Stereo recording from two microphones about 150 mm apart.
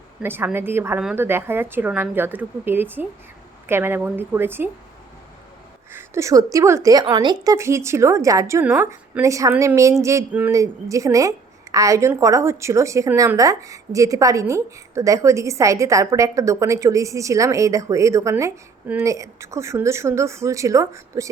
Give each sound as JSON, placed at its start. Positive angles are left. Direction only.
{"t": 0.2, "sound": "speech", "side_deg": -15}
{"t": 5.9, "sound": "a woman's voice", "side_deg": -15}
{"t": 7.4, "sound": "a woman's voice", "side_deg": -20}